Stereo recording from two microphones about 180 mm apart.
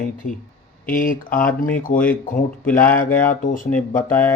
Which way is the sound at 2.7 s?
50° left (ahead or behind).